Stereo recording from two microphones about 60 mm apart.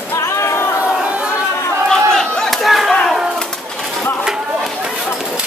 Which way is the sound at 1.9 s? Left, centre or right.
Centre.